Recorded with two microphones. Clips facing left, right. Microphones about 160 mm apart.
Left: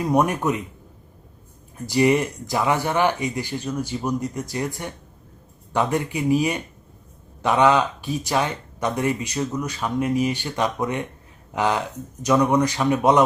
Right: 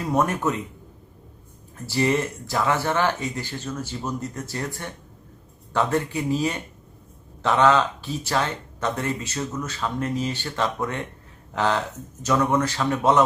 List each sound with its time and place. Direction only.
0.0 s speech: 15° left (ahead or behind)
1.9 s speech: 15° left (ahead or behind)